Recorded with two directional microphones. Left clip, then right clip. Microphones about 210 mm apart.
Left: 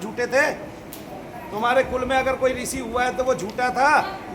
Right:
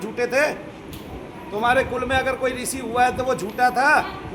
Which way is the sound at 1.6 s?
25° right (ahead or behind).